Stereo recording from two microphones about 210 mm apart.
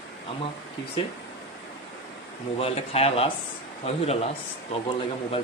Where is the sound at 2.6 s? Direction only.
30° left (ahead or behind).